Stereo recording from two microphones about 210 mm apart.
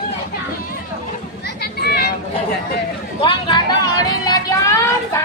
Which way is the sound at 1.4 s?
50° left (ahead or behind).